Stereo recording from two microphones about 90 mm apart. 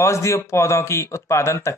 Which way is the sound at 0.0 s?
30° left (ahead or behind).